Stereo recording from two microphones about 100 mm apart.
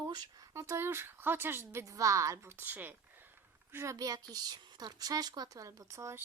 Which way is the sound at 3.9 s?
40° right (ahead or behind).